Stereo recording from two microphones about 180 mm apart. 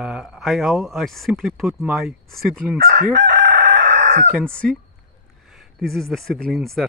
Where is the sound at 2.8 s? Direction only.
55° right (ahead or behind).